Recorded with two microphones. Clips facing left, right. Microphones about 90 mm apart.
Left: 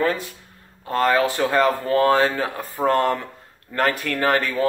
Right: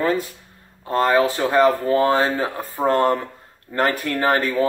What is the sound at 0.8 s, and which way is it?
Speech, 25° right (ahead or behind).